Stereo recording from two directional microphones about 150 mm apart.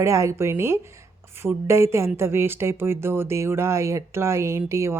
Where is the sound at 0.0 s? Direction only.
20° right (ahead or behind).